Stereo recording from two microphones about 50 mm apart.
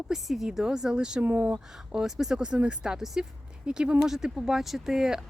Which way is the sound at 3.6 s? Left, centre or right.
Centre.